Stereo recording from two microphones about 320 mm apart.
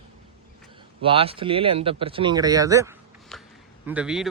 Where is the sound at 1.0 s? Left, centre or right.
Centre.